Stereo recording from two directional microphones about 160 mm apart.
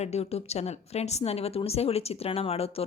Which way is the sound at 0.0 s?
40° left (ahead or behind).